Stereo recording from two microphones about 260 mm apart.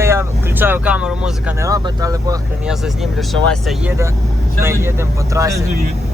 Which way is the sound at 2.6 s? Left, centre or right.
Centre.